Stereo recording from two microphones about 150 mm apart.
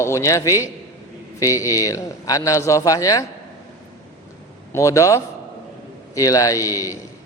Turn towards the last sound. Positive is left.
turn(degrees=20)  # may be behind; listen again after turning